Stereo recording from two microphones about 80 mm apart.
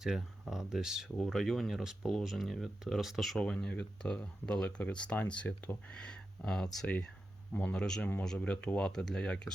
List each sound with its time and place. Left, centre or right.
0.0 s speech: centre
3.3 s speech: centre
7.5 s speech: centre